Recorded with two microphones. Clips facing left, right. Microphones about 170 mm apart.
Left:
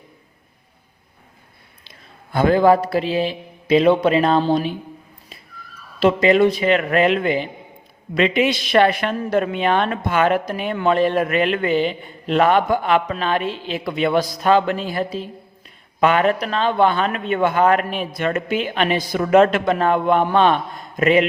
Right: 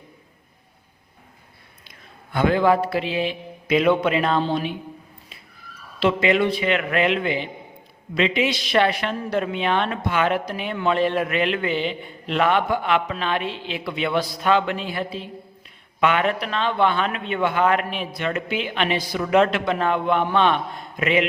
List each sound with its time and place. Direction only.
2.3 s a man's voice: 40° left (ahead or behind)
6.0 s a man's voice: 40° left (ahead or behind)